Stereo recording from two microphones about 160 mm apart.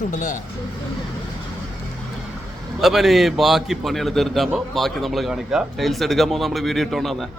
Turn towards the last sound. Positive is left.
turn(degrees=0)  # may be behind; listen again after turning